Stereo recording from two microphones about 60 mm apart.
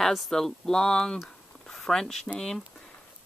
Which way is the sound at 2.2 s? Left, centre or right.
Centre.